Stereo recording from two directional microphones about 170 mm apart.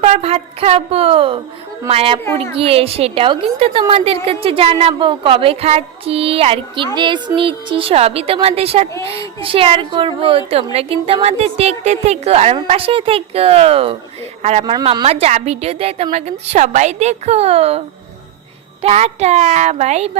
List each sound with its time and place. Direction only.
0.0 s a woman's voice: 35° right (ahead or behind)
14.6 s speech: 25° right (ahead or behind)
15.0 s a woman's voice: 35° right (ahead or behind)